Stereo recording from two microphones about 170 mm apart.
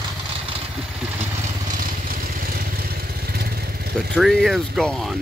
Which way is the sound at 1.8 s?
55° right (ahead or behind).